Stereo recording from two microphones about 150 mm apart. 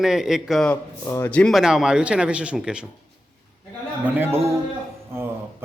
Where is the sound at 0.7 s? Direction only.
15° left (ahead or behind).